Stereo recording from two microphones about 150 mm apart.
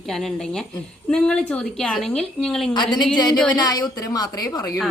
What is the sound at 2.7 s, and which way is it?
A woman's voice, 30° left (ahead or behind).